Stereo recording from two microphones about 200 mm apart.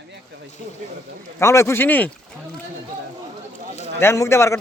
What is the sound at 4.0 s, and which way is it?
Speech, 15° left (ahead or behind).